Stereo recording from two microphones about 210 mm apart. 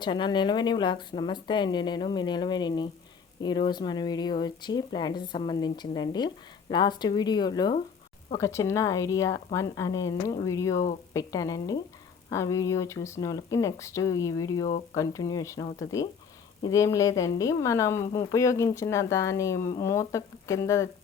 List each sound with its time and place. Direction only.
0.0 s a woman's voice: 20° left (ahead or behind)